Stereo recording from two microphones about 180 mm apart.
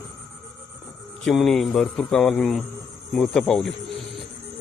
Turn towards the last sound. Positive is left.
turn(degrees=5)  # may be behind; listen again after turning